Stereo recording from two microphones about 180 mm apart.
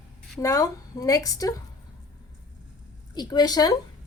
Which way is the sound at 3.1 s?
20° left (ahead or behind).